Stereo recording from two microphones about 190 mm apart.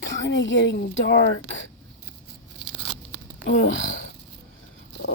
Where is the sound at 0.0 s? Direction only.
75° left (ahead or behind).